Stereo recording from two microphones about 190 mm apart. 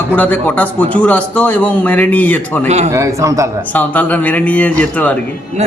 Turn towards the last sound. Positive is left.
turn(degrees=10)  # may be behind; listen again after turning